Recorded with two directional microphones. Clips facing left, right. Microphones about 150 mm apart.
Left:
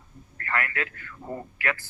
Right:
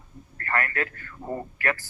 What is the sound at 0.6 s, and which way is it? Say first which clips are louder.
Speech: right 3 dB; 30° right (ahead or behind).